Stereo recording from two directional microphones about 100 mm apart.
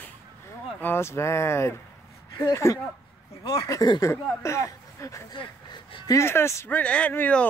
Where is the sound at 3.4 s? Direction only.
60° left (ahead or behind).